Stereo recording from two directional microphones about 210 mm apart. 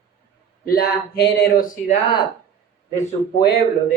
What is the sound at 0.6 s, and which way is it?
Speech, 50° left (ahead or behind).